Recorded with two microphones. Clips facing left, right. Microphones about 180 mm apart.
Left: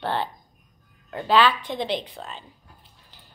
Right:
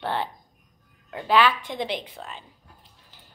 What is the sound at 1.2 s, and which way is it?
Speech, 25° left (ahead or behind).